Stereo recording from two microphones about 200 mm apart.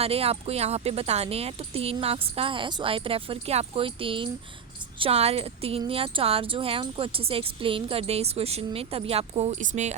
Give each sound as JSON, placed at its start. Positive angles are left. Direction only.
{"t": 0.0, "sound": "a woman's voice", "side_deg": -30}